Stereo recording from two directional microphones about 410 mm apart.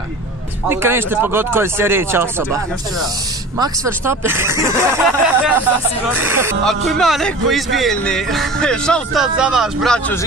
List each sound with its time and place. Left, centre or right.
0.7 s a man's voice: centre